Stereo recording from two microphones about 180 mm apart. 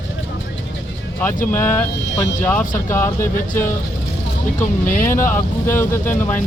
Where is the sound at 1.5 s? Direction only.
15° left (ahead or behind).